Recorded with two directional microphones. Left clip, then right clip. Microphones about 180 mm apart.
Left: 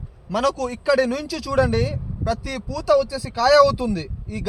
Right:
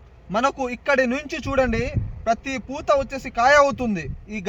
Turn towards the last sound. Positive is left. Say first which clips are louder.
# even
turn(degrees=25)  # may be behind; listen again after turning